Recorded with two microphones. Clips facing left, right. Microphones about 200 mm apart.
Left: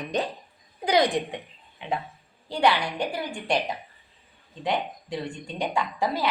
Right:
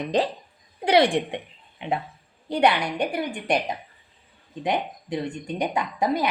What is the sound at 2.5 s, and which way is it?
A woman's voice, 20° right (ahead or behind).